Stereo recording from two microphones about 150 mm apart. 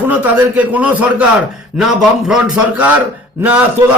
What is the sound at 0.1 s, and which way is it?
A man's voice, 10° right (ahead or behind).